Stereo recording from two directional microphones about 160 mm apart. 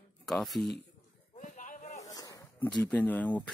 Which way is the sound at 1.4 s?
55° left (ahead or behind).